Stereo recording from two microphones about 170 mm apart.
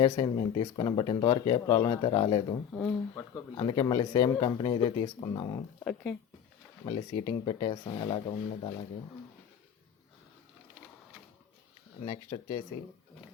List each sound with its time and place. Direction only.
0.0 s speech: 30° left (ahead or behind)
1.6 s speech: 20° left (ahead or behind)
1.9 s speech: 30° left (ahead or behind)
2.7 s speech: 5° left (ahead or behind)
3.5 s speech: 25° left (ahead or behind)
5.8 s speech: 5° left (ahead or behind)
6.8 s speech: 35° left (ahead or behind)
12.3 s speech: 25° left (ahead or behind)